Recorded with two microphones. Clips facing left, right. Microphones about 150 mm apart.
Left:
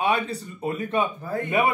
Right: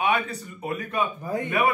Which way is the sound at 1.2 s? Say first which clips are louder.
Even; 15° right (ahead or behind).